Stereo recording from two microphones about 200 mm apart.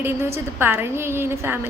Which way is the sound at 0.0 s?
10° right (ahead or behind).